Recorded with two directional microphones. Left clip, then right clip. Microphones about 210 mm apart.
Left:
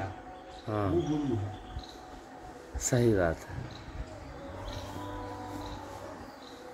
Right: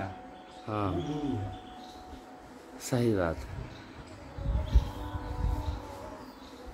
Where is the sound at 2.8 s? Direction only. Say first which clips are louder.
Left 2 dB; centre (ahead or behind).